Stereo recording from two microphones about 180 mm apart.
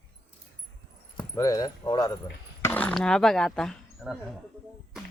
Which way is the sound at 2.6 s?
10° left (ahead or behind).